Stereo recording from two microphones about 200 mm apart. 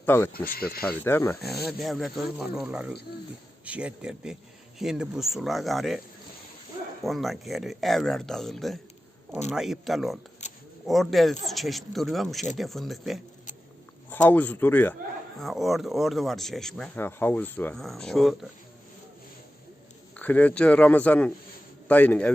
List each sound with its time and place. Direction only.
0.0 s a man's voice: 10° left (ahead or behind)
0.4 s speech: 45° left (ahead or behind)
0.9 s a man's voice: 10° left (ahead or behind)
1.8 s speech: centre (ahead or behind)
7.0 s speech: centre (ahead or behind)
10.4 s a sound: 35° left (ahead or behind)
10.8 s a man's voice: centre (ahead or behind)
20.1 s a man's voice: 10° left (ahead or behind)